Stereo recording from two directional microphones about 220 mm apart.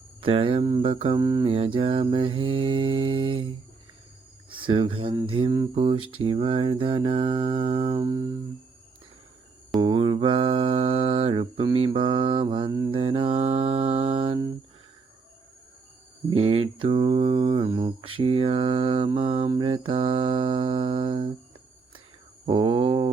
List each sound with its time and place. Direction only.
0.2 s speech: 25° right (ahead or behind)
4.4 s speech: 25° right (ahead or behind)
9.8 s speech: 25° right (ahead or behind)
16.3 s speech: 25° right (ahead or behind)
22.4 s speech: 25° right (ahead or behind)